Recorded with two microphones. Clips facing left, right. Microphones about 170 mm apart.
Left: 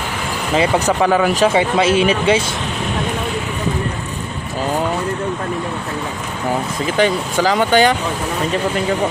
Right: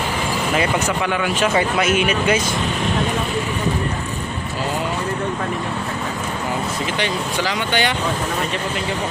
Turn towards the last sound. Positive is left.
turn(degrees=45)  # may be behind; listen again after turning